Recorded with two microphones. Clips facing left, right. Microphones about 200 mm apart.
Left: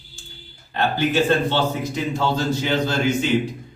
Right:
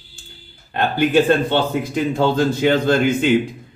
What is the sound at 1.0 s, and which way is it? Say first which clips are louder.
A man's voice: right 5 dB; 55° right (ahead or behind).